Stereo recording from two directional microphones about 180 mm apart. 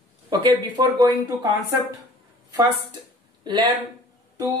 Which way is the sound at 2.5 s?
25° right (ahead or behind).